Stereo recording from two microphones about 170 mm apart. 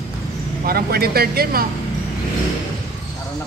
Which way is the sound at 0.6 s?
65° right (ahead or behind).